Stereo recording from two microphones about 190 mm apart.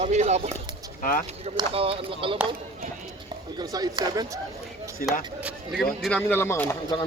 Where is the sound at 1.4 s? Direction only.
30° right (ahead or behind).